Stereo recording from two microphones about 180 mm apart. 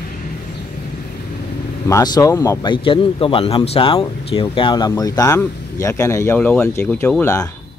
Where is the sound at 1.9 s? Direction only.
20° left (ahead or behind).